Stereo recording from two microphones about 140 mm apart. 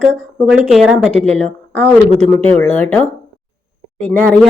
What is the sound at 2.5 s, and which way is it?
Speech, 10° left (ahead or behind).